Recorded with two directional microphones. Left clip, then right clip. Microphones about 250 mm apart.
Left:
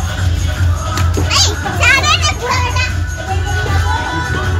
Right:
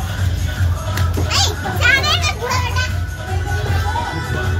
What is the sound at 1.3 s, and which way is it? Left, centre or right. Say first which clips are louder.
Children playing: left 4 dB; right.